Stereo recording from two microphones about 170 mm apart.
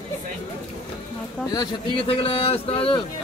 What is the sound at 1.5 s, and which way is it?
Speech, 20° left (ahead or behind).